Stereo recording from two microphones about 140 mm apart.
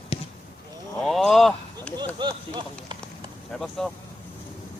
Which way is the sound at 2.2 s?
35° right (ahead or behind).